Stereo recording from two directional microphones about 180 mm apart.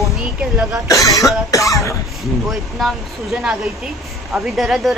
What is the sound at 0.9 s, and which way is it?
Speech, 20° left (ahead or behind).